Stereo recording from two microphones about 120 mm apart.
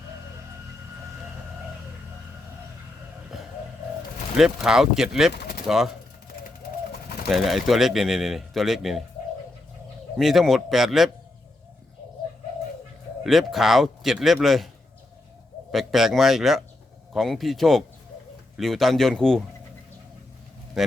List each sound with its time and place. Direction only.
4.4 s speech: 5° right (ahead or behind)
7.3 s speech: centre (ahead or behind)
10.2 s speech: centre (ahead or behind)
13.2 s speech: centre (ahead or behind)
15.7 s speech: centre (ahead or behind)